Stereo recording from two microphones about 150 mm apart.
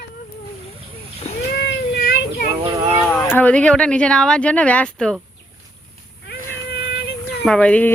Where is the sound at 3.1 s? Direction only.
5° left (ahead or behind).